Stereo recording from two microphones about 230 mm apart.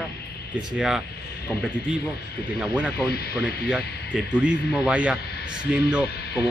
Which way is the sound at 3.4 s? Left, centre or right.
Centre.